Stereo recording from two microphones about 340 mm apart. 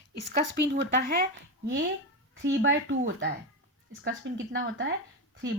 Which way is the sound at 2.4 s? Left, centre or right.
Right.